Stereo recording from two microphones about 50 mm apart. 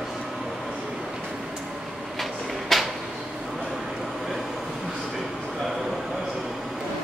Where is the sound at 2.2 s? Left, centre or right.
Centre.